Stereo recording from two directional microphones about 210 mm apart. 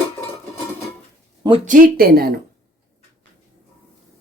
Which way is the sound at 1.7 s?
45° right (ahead or behind).